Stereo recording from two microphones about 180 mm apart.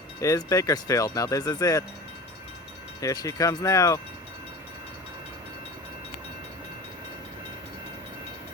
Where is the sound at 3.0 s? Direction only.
20° left (ahead or behind).